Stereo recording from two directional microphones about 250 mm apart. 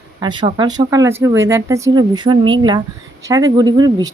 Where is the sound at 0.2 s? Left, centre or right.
Centre.